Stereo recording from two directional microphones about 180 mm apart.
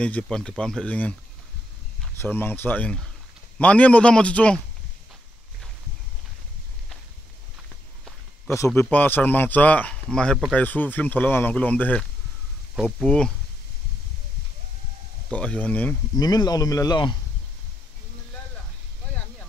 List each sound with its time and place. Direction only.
0.0 s speech: 5° left (ahead or behind)
2.1 s a man's voice: 10° left (ahead or behind)
8.5 s a man's voice: 15° left (ahead or behind)
15.3 s a man's voice: 10° left (ahead or behind)
16.2 s speech: 20° left (ahead or behind)